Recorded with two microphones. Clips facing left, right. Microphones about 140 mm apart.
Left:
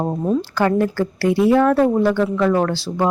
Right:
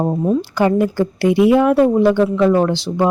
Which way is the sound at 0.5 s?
15° right (ahead or behind).